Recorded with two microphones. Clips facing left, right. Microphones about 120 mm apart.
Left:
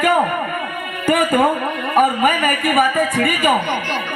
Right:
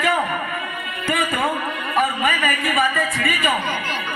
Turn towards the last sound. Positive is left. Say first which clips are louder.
# left 5 dB
turn(degrees=55)  # may be behind; listen again after turning